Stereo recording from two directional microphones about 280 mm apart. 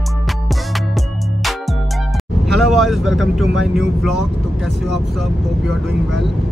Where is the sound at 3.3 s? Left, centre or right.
Centre.